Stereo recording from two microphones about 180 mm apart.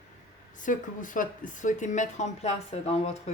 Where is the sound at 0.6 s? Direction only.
45° left (ahead or behind).